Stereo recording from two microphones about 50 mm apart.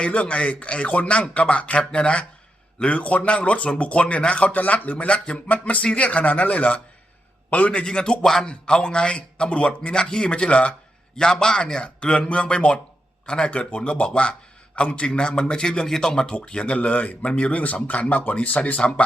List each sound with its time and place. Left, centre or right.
0.0 s a man's voice: left; by 8.4 s centre
8.4 s a man's voice: left
18.8 s speech: left